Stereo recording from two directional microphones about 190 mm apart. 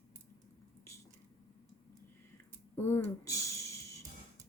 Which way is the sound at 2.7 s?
15° left (ahead or behind).